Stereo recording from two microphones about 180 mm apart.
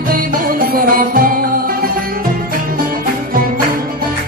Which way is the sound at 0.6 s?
50° right (ahead or behind).